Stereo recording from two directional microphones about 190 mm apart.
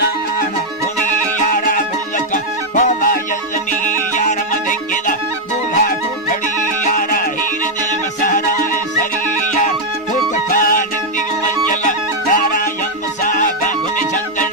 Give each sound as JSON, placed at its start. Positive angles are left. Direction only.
{"t": 1.5, "sound": "music", "side_deg": 45}
{"t": 5.7, "sound": "music", "side_deg": 45}
{"t": 10.3, "sound": "music", "side_deg": 45}